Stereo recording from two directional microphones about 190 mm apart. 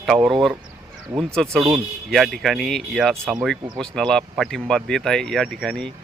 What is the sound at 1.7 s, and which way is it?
Speech, centre (ahead or behind).